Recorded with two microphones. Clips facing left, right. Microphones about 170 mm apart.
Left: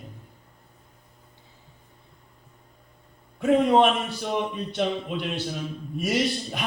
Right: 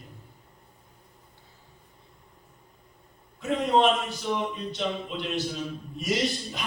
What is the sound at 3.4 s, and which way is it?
A man's voice, 55° left (ahead or behind).